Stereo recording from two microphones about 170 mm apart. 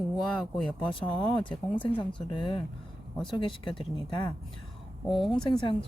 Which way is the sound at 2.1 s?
30° left (ahead or behind).